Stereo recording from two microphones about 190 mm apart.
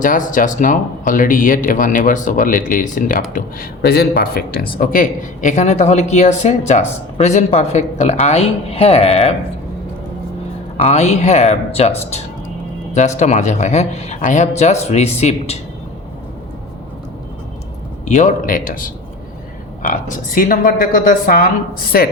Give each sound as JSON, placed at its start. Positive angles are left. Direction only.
{"t": 0.0, "sound": "speech", "side_deg": 45}
{"t": 10.9, "sound": "speech", "side_deg": 35}
{"t": 18.0, "sound": "speech", "side_deg": 40}